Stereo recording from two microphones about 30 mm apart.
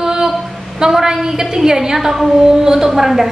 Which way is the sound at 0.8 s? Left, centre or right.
Centre.